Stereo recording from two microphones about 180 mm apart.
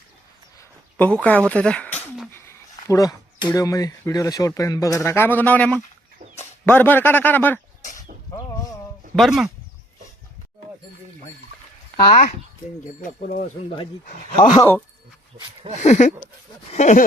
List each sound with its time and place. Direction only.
0.9 s speech: 10° left (ahead or behind)
8.4 s a sound: 20° left (ahead or behind)
9.1 s speech: centre (ahead or behind)
13.0 s speech: 45° left (ahead or behind)
14.5 s speech: 15° left (ahead or behind)
15.7 s a sound: 40° left (ahead or behind)